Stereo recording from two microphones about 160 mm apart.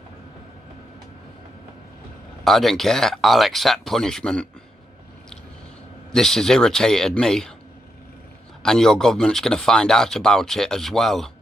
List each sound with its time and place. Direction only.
2.4 s speech: centre (ahead or behind)
6.1 s speech: 5° left (ahead or behind)
8.6 s speech: 5° left (ahead or behind)